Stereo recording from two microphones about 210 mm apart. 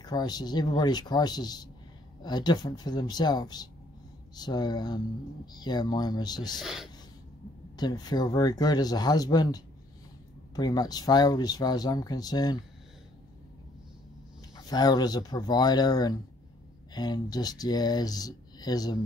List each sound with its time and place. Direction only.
0.0 s speech: 20° left (ahead or behind)
6.6 s speech: centre (ahead or behind)
7.7 s speech: 20° left (ahead or behind)
14.7 s speech: 20° left (ahead or behind)